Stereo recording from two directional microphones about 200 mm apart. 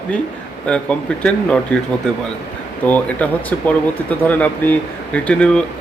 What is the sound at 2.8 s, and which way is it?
Speech, 5° left (ahead or behind).